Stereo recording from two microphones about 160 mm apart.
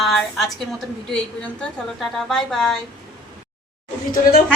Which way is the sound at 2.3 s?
Centre (ahead or behind).